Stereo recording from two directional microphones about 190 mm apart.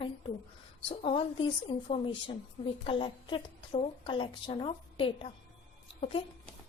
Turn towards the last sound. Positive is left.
turn(degrees=30)  # may be behind; listen again after turning